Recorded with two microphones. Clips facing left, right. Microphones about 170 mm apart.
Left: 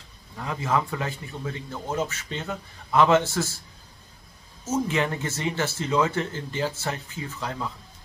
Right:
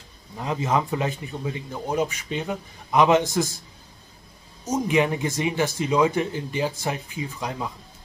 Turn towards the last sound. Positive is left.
turn(degrees=-15)  # may be behind; listen again after turning